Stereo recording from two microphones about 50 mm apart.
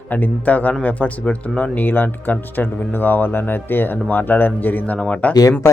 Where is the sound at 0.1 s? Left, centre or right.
Left.